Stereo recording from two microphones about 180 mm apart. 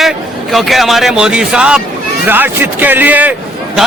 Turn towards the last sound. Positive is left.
turn(degrees=-10)  # may be behind; listen again after turning